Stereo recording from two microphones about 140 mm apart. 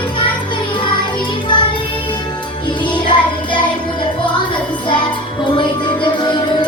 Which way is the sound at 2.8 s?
35° left (ahead or behind).